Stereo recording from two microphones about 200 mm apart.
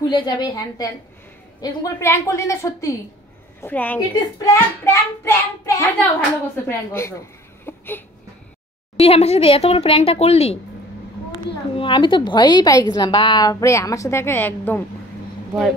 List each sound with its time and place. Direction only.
0.1 s a woman's voice: 20° left (ahead or behind)
8.9 s speech: 30° left (ahead or behind)
11.7 s a woman's voice: 25° left (ahead or behind)